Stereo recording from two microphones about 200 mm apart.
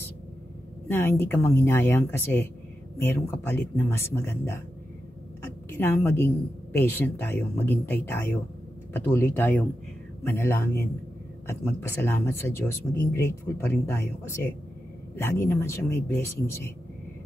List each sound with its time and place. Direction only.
0.8 s speech: 10° left (ahead or behind)
5.7 s speech: 10° left (ahead or behind)